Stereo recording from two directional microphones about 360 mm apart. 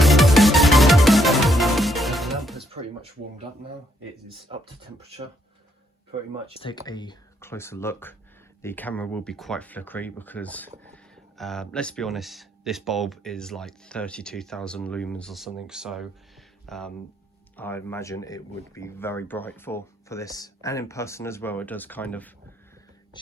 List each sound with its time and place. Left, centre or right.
0.0 s music: centre
4.3 s speech: centre
6.6 s speech: centre